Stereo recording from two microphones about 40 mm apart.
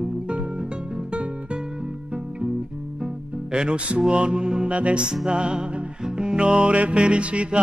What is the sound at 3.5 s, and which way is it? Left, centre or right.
Music, right.